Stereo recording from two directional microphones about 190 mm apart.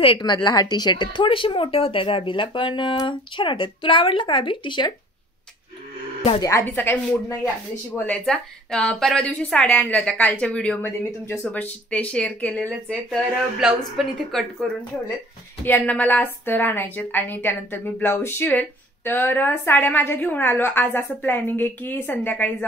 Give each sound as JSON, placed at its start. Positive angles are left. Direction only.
{"t": 0.0, "sound": "speech", "side_deg": 25}
{"t": 6.4, "sound": "a woman's voice", "side_deg": 10}